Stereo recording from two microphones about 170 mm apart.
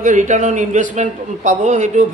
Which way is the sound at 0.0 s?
45° right (ahead or behind).